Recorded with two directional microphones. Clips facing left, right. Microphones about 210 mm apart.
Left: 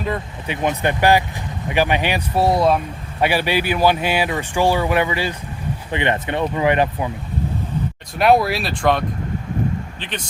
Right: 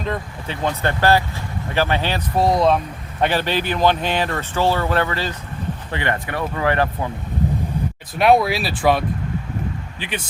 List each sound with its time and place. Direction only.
0.0 s speech: 10° left (ahead or behind)
8.1 s speech: centre (ahead or behind)